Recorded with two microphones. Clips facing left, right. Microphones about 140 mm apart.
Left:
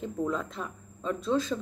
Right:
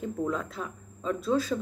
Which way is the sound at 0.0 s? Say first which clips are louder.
Even; centre (ahead or behind).